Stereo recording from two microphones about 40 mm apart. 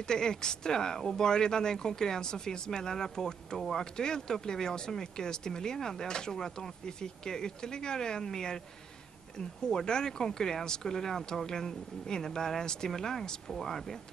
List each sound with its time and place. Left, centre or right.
0.0 s speech: centre
9.7 s speech: centre